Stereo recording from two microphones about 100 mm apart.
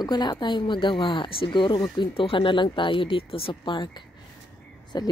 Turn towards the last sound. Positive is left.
turn(degrees=45)  # may be behind; listen again after turning